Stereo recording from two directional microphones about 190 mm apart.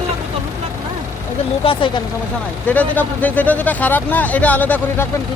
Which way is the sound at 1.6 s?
30° left (ahead or behind).